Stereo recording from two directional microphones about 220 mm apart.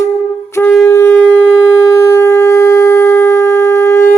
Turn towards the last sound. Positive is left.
turn(degrees=10)  # may be behind; listen again after turning